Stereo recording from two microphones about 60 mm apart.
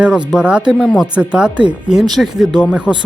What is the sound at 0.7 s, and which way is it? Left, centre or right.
Speech, centre.